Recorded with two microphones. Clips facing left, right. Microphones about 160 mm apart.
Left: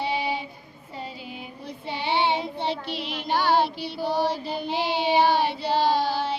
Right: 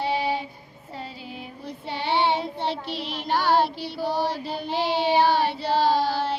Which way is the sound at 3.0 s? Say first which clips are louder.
Even; 55° left (ahead or behind).